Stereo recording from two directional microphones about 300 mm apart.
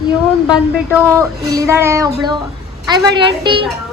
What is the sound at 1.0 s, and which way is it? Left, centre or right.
Speech, centre.